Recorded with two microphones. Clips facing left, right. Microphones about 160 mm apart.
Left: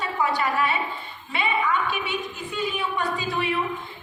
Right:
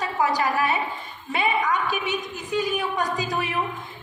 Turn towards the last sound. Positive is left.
turn(degrees=-40)  # may be behind; listen again after turning